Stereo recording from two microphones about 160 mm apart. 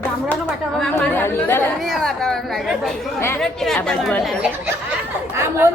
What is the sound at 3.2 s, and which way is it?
Speech, 15° left (ahead or behind).